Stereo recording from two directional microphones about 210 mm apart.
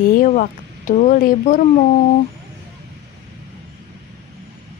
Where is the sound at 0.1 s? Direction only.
40° left (ahead or behind).